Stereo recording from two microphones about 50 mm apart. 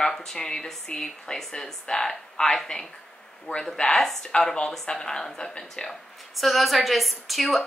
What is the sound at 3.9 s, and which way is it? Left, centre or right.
Speech, centre.